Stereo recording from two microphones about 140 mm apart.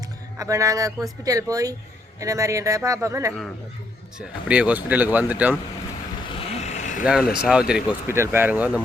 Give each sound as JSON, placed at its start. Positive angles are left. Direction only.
{"t": 0.3, "sound": "speech", "side_deg": -25}
{"t": 4.4, "sound": "speech", "side_deg": -10}
{"t": 6.3, "sound": "vehicle", "side_deg": 50}
{"t": 7.0, "sound": "speech", "side_deg": -5}
{"t": 8.0, "sound": "speech", "side_deg": -20}